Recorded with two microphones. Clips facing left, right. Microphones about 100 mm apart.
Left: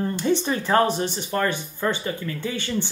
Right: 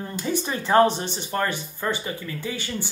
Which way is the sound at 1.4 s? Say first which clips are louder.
Left 3 dB; 10° right (ahead or behind).